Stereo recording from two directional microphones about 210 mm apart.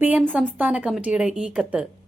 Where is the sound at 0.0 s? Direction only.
5° right (ahead or behind).